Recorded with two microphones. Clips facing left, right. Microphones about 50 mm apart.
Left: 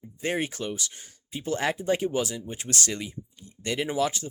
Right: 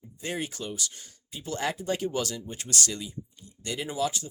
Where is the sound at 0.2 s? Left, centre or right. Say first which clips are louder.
Left 5 dB; left.